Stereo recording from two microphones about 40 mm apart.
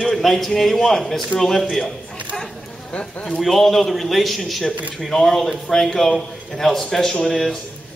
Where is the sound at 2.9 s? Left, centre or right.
Left.